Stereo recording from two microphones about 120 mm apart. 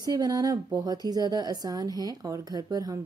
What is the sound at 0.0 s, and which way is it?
Speech, 30° right (ahead or behind).